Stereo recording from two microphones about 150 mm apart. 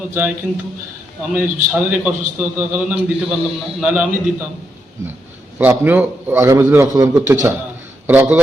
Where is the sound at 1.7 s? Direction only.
5° right (ahead or behind).